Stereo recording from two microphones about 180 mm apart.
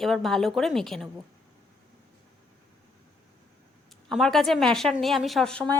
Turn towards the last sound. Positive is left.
turn(degrees=5)  # may be behind; listen again after turning